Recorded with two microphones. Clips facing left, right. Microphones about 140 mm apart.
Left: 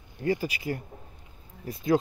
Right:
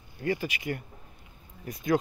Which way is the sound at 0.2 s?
30° left (ahead or behind).